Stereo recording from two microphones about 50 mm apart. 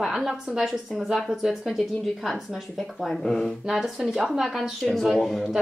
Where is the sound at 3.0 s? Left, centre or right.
Centre.